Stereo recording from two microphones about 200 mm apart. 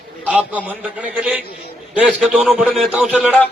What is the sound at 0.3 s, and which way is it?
A man's voice, 5° right (ahead or behind).